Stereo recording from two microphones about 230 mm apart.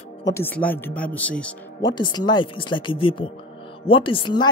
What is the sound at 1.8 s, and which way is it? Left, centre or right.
Speech, centre.